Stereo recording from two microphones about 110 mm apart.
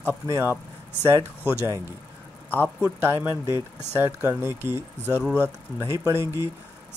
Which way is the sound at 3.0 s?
25° right (ahead or behind).